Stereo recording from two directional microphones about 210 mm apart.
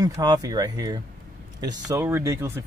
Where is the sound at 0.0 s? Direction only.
20° right (ahead or behind).